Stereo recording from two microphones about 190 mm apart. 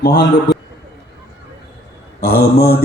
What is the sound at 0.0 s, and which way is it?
Speech, 65° left (ahead or behind).